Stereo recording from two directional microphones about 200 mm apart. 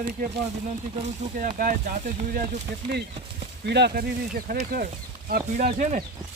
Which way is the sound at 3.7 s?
55° right (ahead or behind).